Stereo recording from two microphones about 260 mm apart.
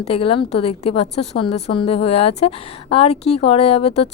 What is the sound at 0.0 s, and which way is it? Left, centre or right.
A woman's voice, left.